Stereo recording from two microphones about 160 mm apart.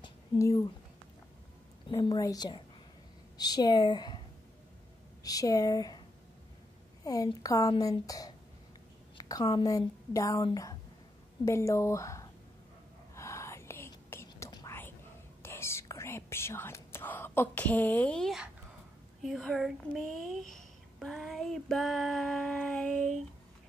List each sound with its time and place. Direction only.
0.0 s a sound: 20° left (ahead or behind)
1.9 s a woman's voice: 25° left (ahead or behind)
5.2 s speech: 20° left (ahead or behind)
7.0 s a woman's voice: 20° left (ahead or behind)
13.1 s whispering: 20° left (ahead or behind); by 18.5 s centre (ahead or behind)
19.2 s a sound: centre (ahead or behind)
20.5 s female singing: centre (ahead or behind)